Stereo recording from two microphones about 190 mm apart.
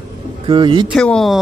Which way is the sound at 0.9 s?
5° left (ahead or behind).